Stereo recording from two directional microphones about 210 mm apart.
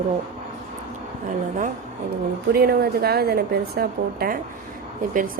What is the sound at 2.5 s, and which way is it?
A woman's voice, 45° right (ahead or behind).